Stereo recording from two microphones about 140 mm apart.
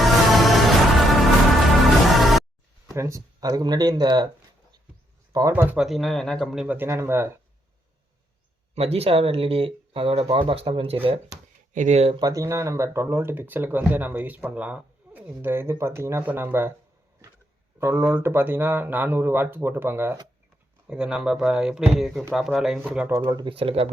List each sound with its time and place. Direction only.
0.0 s music: centre (ahead or behind)
2.9 s speech: 20° right (ahead or behind)
5.3 s speech: 20° right (ahead or behind)
5.7 s speech: centre (ahead or behind)
6.7 s speech: 20° right (ahead or behind)
8.7 s speech: 45° right (ahead or behind)
11.7 s speech: 60° right (ahead or behind)
12.1 s speech: 25° right (ahead or behind)
17.7 s speech: 15° right (ahead or behind)
23.1 s speech: 30° right (ahead or behind)